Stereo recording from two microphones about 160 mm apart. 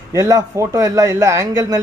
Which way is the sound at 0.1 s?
20° right (ahead or behind).